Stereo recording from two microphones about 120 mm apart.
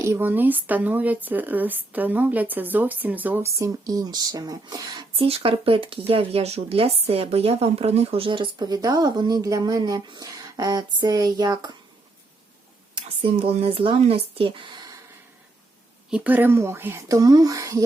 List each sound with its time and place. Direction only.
0.0 s speech: 20° right (ahead or behind)
5.1 s speech: 50° right (ahead or behind); by 11.8 s 35° right (ahead or behind)
12.9 s speech: 50° right (ahead or behind)
16.0 s speech: 10° right (ahead or behind); by 17.8 s 30° right (ahead or behind)